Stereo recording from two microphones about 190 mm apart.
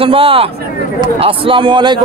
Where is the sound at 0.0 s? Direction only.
30° right (ahead or behind).